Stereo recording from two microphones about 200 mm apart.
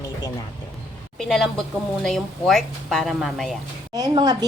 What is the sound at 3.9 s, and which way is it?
Speech, 20° right (ahead or behind).